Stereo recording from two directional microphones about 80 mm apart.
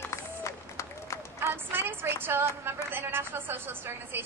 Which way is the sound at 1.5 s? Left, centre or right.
Right.